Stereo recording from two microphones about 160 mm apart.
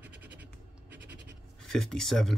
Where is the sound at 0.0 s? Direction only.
10° right (ahead or behind).